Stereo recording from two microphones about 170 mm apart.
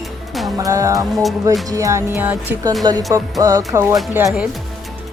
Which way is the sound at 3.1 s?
20° right (ahead or behind).